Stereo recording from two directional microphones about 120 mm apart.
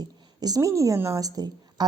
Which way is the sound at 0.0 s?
35° right (ahead or behind).